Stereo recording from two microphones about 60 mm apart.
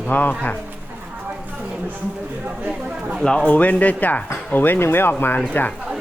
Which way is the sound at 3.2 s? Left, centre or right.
Centre.